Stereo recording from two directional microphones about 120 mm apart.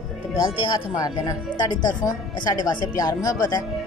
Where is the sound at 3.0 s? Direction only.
35° left (ahead or behind).